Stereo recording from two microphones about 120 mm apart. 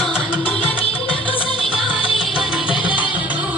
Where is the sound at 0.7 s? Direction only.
50° left (ahead or behind).